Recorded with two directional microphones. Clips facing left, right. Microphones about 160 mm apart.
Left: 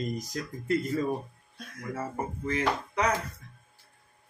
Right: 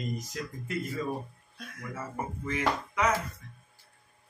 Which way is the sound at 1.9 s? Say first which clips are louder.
Left 3 dB; 35° left (ahead or behind).